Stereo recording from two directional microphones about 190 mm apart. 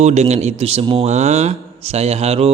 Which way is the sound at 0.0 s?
35° right (ahead or behind).